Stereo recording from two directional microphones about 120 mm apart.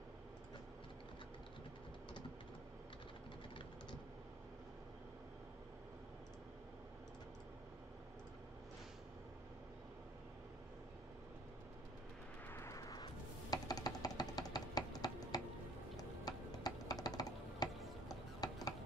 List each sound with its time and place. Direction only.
12.4 s music: 20° left (ahead or behind)